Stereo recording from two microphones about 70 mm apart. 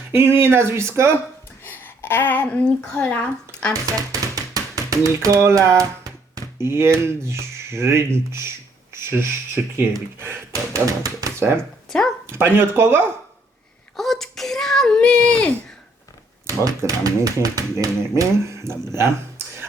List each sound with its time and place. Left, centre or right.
0.1 s speech: right
1.6 s speech: left
3.7 s typewriter: right
5.4 s speech: right
10.5 s speech: right
11.3 s speech: right
11.9 s speech: centre
12.2 s speech: right
13.9 s speech: centre
16.5 s speech: right